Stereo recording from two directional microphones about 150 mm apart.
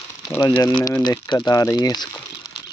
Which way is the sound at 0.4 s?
30° left (ahead or behind).